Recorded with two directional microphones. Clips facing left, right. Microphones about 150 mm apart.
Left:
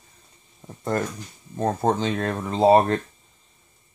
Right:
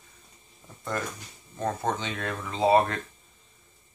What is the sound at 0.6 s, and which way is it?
Speech, 40° left (ahead or behind).